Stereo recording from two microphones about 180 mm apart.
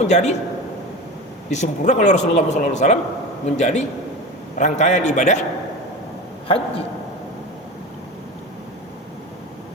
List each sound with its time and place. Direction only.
0.0 s speech: 40° left (ahead or behind)
1.5 s a man's voice: 40° left (ahead or behind)